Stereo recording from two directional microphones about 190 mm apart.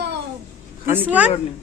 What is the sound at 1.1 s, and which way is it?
Speech, 5° right (ahead or behind).